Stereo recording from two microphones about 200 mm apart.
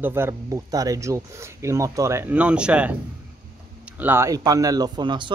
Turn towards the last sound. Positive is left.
turn(degrees=-20)  # may be behind; listen again after turning